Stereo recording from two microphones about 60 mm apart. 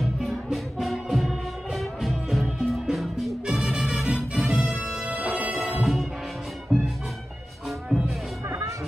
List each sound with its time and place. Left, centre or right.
0.0 s music: centre
4.8 s music: centre
6.7 s music: centre
8.5 s music: right